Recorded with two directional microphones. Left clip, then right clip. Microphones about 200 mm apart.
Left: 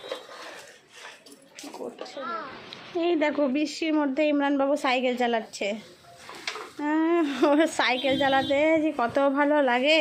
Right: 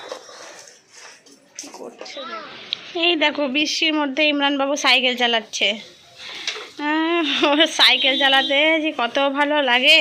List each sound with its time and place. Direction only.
2.0 s speech: 5° left (ahead or behind)
6.7 s speech: centre (ahead or behind)